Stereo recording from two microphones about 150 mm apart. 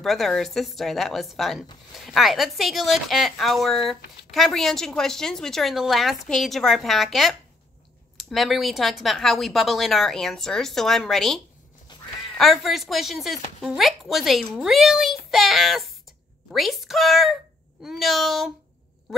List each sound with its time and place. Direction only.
0.0 s speech: centre (ahead or behind)
11.9 s duck: 30° left (ahead or behind)
12.4 s speech: centre (ahead or behind)
19.1 s quack: centre (ahead or behind)